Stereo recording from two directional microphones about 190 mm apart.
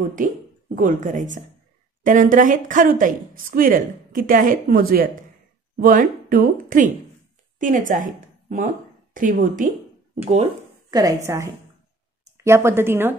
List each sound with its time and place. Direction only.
0.7 s a woman's voice: 40° right (ahead or behind)
10.2 s speech: 30° right (ahead or behind)
10.9 s speech: 20° right (ahead or behind)